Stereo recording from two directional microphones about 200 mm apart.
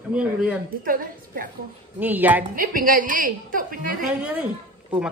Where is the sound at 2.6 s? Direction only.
45° right (ahead or behind).